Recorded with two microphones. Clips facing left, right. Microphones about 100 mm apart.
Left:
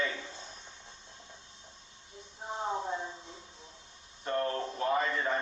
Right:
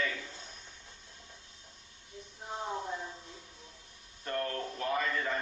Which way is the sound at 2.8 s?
25° left (ahead or behind).